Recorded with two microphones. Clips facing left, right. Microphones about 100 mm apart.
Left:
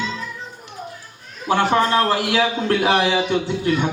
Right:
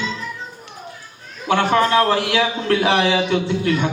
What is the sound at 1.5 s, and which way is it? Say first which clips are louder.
Speech: right 1 dB; 30° left (ahead or behind).